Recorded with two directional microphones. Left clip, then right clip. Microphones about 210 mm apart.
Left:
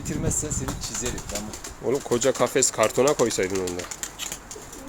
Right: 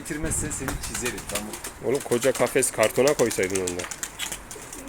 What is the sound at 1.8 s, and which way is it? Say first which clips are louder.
Speech: even; 5° left (ahead or behind).